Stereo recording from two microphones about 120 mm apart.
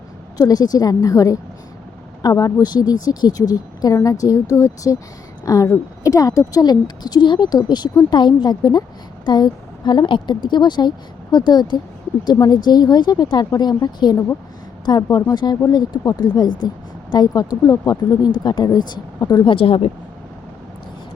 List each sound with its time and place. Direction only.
0.3 s speech: 35° left (ahead or behind)
19.5 s speech: 50° left (ahead or behind)